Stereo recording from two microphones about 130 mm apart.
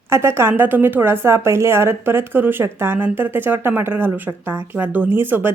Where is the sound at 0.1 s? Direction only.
20° right (ahead or behind).